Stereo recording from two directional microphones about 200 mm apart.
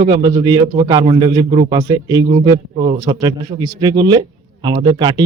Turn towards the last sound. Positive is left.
turn(degrees=-20)  # may be behind; listen again after turning